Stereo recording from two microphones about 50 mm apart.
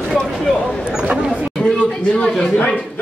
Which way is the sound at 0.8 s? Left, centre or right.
Centre.